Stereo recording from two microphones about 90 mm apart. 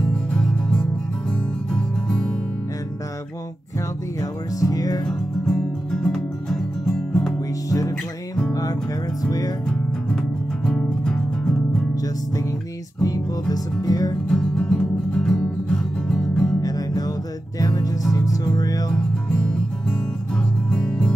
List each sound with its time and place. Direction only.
0.0 s music: 10° left (ahead or behind)
4.2 s music: 40° left (ahead or behind)
5.0 s music: 5° left (ahead or behind)
9.2 s music: 45° left (ahead or behind)
9.7 s music: 5° left (ahead or behind)
13.0 s music: 45° left (ahead or behind)
14.3 s music: 5° left (ahead or behind)
16.6 s music: 45° left (ahead or behind)
18.9 s music: 10° left (ahead or behind)